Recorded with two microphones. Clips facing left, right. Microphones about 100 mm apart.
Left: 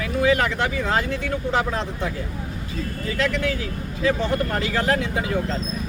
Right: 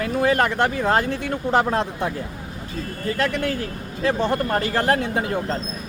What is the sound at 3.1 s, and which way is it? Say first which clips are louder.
Speech: even; 45° right (ahead or behind).